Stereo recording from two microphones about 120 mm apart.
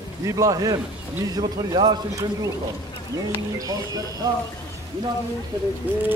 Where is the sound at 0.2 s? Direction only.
30° right (ahead or behind).